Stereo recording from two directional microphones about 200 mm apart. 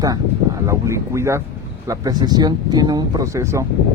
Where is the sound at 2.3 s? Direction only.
20° right (ahead or behind).